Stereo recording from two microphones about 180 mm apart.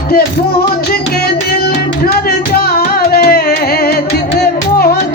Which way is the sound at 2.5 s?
55° left (ahead or behind).